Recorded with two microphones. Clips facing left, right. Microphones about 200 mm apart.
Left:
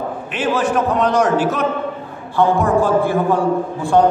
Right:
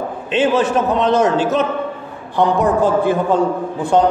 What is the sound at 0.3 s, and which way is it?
A man's voice, 25° right (ahead or behind).